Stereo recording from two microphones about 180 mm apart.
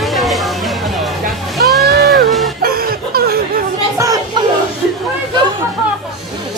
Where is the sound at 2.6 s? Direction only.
55° right (ahead or behind).